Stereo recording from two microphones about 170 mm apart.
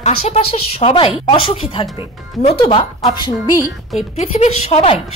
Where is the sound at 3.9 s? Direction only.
40° left (ahead or behind).